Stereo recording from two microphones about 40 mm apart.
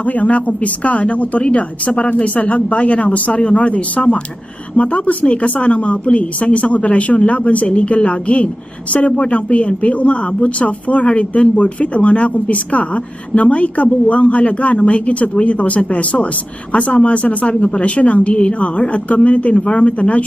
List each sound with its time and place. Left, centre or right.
0.0 s speech: left